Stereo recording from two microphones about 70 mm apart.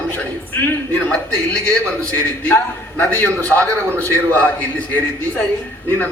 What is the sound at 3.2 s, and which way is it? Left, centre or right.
A man's voice, left.